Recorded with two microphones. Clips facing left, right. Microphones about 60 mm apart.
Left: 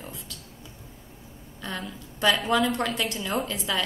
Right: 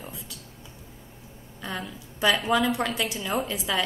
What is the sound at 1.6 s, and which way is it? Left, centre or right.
A woman's voice, centre.